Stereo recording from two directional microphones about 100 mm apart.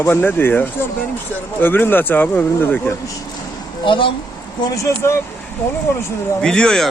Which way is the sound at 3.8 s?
55° left (ahead or behind).